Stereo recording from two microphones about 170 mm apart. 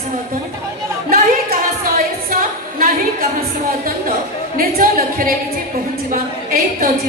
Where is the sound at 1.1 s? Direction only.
60° right (ahead or behind).